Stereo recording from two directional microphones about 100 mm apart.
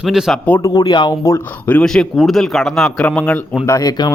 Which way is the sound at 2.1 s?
Centre (ahead or behind).